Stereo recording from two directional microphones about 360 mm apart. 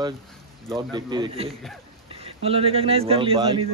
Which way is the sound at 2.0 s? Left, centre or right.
Centre.